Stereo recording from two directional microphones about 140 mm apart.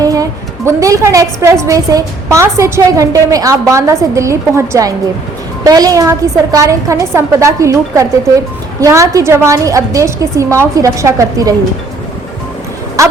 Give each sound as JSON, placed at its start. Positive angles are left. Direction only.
{"t": 0.0, "sound": "a woman's voice", "side_deg": -25}
{"t": 13.0, "sound": "speech", "side_deg": -25}